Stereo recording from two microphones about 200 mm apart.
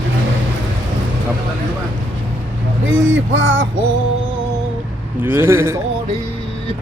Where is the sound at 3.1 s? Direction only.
70° right (ahead or behind).